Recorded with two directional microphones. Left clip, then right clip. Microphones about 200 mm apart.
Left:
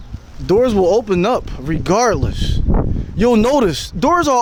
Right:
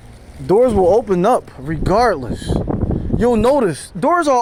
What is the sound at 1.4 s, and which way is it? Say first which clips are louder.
Speech: left 2 dB; 35° left (ahead or behind).